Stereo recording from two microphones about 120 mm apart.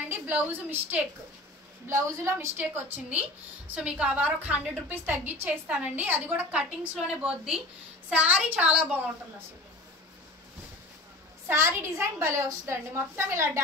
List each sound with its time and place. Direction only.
0.1 s a woman's voice: 15° right (ahead or behind)
11.4 s a woman's voice: 20° right (ahead or behind)